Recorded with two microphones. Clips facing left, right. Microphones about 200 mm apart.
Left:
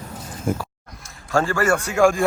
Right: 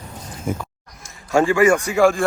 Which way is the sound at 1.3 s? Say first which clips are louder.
Right 5 dB; 15° right (ahead or behind).